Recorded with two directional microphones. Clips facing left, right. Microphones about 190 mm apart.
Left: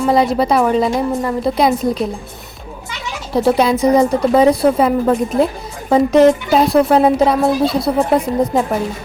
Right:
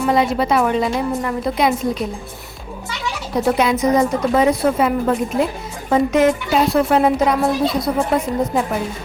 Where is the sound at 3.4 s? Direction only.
35° left (ahead or behind).